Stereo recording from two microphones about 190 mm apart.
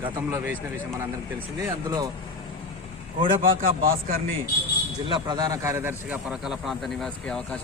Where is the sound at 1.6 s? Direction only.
20° right (ahead or behind).